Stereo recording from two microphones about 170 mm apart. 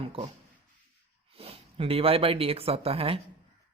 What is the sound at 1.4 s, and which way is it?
Speech, 35° right (ahead or behind).